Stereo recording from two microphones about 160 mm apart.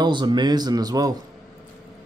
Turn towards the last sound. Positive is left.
turn(degrees=-25)  # may be behind; listen again after turning